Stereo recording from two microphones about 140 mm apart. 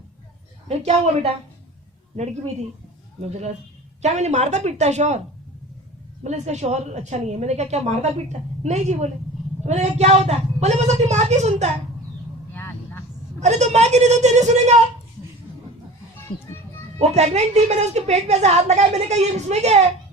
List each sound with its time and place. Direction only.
0.7 s a woman's voice: 50° right (ahead or behind)
3.2 s a woman's voice: 50° right (ahead or behind)
6.2 s a woman's voice: 55° right (ahead or behind)
12.5 s vehicle: 15° left (ahead or behind)
13.4 s speech: 55° right (ahead or behind)
17.0 s a woman's voice: 55° right (ahead or behind)